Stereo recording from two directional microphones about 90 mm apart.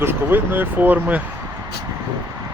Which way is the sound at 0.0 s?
25° right (ahead or behind).